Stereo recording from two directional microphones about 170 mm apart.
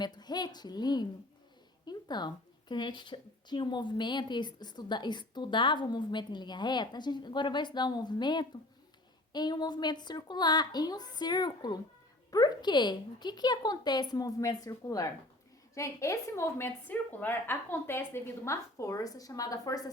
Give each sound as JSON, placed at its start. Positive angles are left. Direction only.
{"t": 0.0, "sound": "a woman's voice", "side_deg": 25}